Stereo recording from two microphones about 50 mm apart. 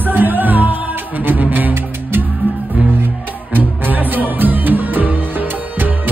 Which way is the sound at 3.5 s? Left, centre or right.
Right.